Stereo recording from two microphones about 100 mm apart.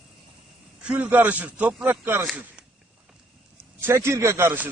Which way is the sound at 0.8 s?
15° right (ahead or behind).